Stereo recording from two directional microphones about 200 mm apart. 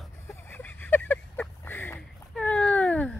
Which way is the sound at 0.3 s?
10° left (ahead or behind).